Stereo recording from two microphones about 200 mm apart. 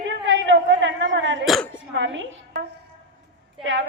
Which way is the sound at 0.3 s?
70° right (ahead or behind).